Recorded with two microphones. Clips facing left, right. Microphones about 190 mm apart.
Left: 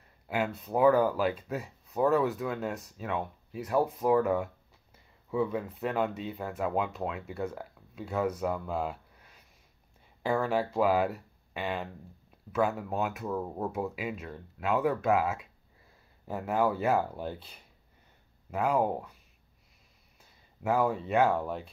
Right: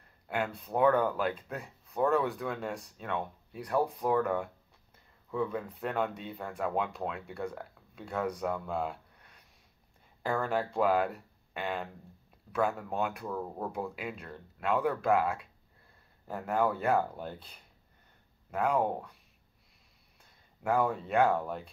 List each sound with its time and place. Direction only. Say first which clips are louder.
0.0 s a sound: left 2 dB; 5° left (ahead or behind)
0.6 s speech: left 3 dB; 5° left (ahead or behind)
20.2 s speech: left 5 dB; 5° left (ahead or behind)